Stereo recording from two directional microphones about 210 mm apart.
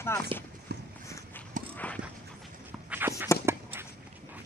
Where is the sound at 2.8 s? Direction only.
10° right (ahead or behind).